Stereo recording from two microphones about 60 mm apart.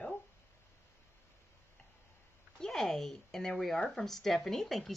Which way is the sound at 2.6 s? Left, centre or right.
Centre.